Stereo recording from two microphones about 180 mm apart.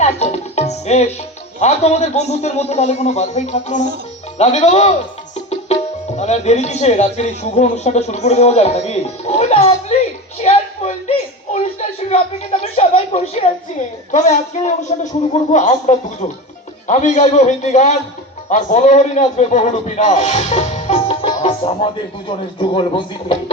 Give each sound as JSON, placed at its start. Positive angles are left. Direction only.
{"t": 0.0, "sound": "music", "side_deg": 35}
{"t": 1.5, "sound": "speech", "side_deg": 40}
{"t": 10.4, "sound": "a sound", "side_deg": 35}
{"t": 14.1, "sound": "speech", "side_deg": 40}
{"t": 21.2, "sound": "music", "side_deg": 30}
{"t": 22.3, "sound": "speech", "side_deg": 30}